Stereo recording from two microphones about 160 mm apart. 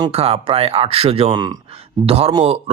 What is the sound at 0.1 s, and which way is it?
Speech, 40° right (ahead or behind).